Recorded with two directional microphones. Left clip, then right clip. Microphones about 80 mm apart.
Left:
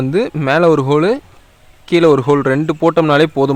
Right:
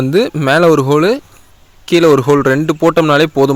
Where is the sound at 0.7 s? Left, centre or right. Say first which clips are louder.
Right 2 dB; centre.